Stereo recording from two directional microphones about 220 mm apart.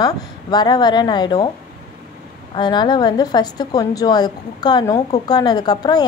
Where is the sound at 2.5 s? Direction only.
20° left (ahead or behind).